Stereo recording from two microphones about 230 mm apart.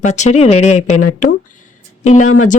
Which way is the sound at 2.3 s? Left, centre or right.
Left.